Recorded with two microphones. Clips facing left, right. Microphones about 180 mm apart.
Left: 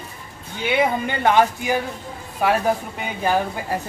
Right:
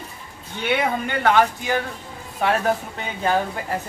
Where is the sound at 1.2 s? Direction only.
15° left (ahead or behind).